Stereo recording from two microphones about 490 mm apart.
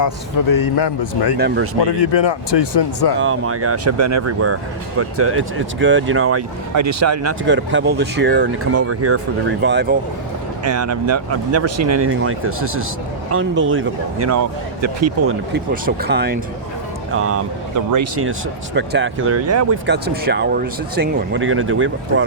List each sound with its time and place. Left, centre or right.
0.5 s speech: left
1.4 s speech: right
1.8 s speech: left
3.2 s speech: right
15.5 s speech: centre